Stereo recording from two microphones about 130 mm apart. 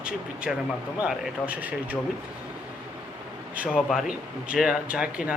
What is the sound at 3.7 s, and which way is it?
Speech, centre (ahead or behind).